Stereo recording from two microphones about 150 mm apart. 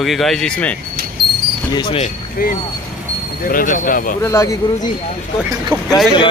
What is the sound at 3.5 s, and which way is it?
Speech, 65° left (ahead or behind).